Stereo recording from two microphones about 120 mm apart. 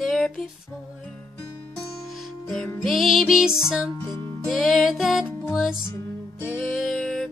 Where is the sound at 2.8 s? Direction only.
Centre (ahead or behind).